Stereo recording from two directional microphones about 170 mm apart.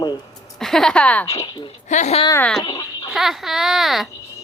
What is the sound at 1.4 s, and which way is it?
Speech, 25° left (ahead or behind).